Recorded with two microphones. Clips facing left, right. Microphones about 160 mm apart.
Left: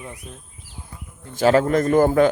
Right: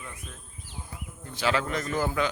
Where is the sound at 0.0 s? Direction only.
25° left (ahead or behind).